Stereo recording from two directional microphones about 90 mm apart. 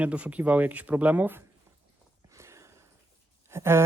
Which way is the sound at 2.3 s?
30° right (ahead or behind).